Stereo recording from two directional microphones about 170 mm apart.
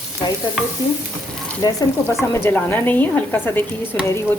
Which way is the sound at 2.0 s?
15° left (ahead or behind).